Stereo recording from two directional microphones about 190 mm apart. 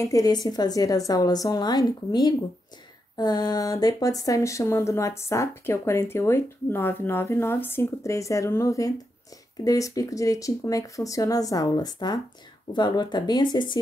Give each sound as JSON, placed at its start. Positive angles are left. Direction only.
{"t": 0.0, "sound": "a woman's voice", "side_deg": 20}